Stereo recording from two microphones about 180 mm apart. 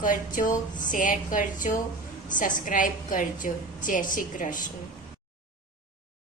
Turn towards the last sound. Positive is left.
turn(degrees=45)  # may be behind; listen again after turning